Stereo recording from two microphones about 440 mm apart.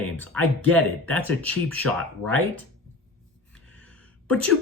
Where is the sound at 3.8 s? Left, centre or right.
Centre.